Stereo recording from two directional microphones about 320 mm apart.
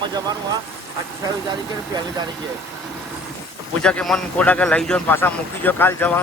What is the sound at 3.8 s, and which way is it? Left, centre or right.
A man's voice, centre.